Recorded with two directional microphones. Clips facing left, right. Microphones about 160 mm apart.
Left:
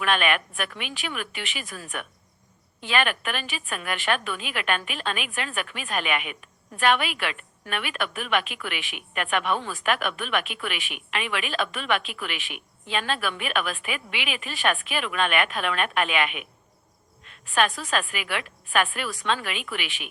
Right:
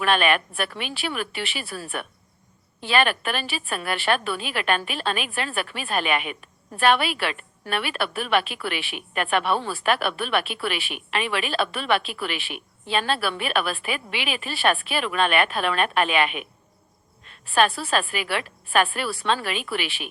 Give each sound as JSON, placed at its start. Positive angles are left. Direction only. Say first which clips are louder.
{"t": 0.0, "sound": "a woman's voice", "louder": "right 3 dB", "side_deg": -35}